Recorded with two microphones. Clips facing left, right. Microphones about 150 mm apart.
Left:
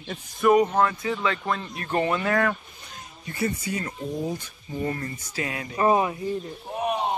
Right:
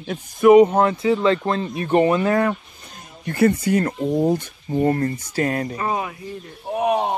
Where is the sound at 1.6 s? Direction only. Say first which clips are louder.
Right 8 dB; 15° right (ahead or behind).